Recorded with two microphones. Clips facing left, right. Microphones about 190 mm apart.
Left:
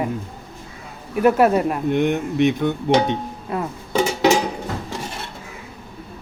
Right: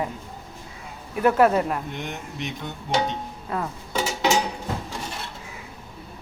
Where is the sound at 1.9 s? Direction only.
60° left (ahead or behind).